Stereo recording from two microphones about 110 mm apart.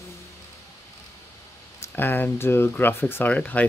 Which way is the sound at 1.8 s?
20° left (ahead or behind).